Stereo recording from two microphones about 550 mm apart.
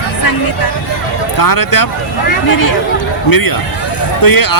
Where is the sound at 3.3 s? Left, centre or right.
Left.